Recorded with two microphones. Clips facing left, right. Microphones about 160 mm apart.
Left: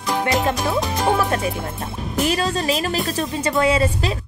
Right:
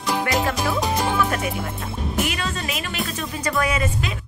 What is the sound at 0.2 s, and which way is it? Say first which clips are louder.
Music: left 5 dB; 20° left (ahead or behind).